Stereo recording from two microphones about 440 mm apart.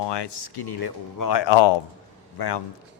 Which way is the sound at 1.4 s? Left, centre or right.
Left.